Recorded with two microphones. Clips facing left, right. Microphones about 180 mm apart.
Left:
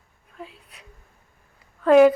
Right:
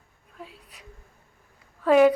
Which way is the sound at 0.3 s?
Centre (ahead or behind).